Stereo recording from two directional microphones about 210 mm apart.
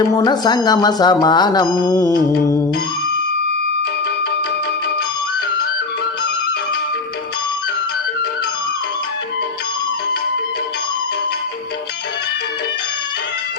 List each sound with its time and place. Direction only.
0.2 s speech: 20° left (ahead or behind)